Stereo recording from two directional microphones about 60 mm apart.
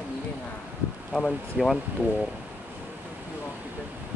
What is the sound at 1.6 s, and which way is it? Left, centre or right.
Speech, centre.